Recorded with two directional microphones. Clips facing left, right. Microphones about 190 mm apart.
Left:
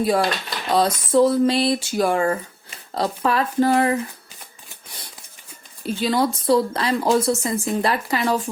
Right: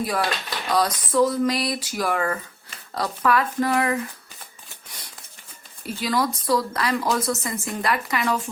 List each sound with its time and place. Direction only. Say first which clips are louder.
0.0 s speech: left 5 dB; 25° left (ahead or behind)
5.8 s speech: left 4 dB; 25° left (ahead or behind)